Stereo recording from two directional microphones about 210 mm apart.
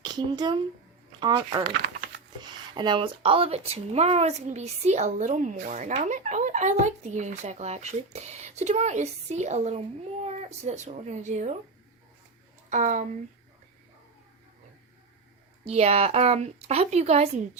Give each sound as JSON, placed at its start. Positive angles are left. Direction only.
{"t": 0.0, "sound": "speech", "side_deg": -20}
{"t": 12.7, "sound": "speech", "side_deg": -35}
{"t": 15.6, "sound": "speech", "side_deg": -30}